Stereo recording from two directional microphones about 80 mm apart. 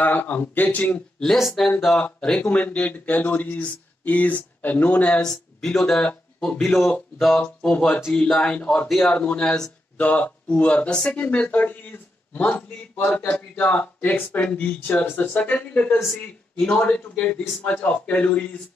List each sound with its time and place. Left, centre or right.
0.0 s speech: left
1.2 s speech: centre
7.4 s speech: centre
8.8 s speech: centre
9.1 s speech: centre